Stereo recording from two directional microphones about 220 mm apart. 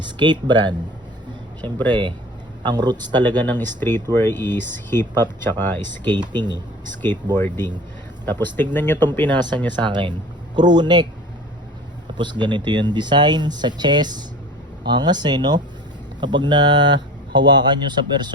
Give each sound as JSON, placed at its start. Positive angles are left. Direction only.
{"t": 0.0, "sound": "speech", "side_deg": -20}
{"t": 1.9, "sound": "speech", "side_deg": -20}
{"t": 3.3, "sound": "speech", "side_deg": 10}
{"t": 6.1, "sound": "speech", "side_deg": -20}
{"t": 7.0, "sound": "speech", "side_deg": 10}
{"t": 9.3, "sound": "speech", "side_deg": -20}
{"t": 12.1, "sound": "speech", "side_deg": -20}